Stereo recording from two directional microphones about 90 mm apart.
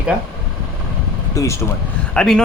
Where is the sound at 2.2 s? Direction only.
5° left (ahead or behind).